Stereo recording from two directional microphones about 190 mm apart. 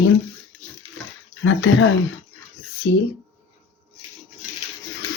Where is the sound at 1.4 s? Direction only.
85° left.